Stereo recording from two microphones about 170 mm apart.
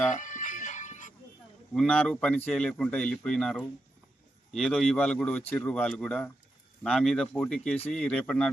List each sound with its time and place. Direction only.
0.1 s music: 50° left (ahead or behind)
1.7 s speech: 5° left (ahead or behind)